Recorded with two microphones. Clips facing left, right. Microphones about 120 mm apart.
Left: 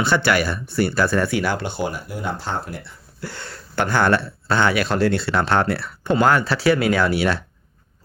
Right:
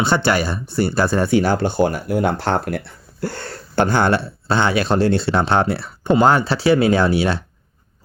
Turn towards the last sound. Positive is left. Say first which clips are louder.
# right 3 dB
turn(degrees=-25)  # may be behind; listen again after turning